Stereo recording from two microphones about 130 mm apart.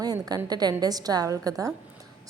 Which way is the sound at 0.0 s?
30° right (ahead or behind).